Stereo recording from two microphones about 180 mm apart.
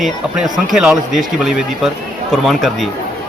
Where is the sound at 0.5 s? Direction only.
Centre (ahead or behind).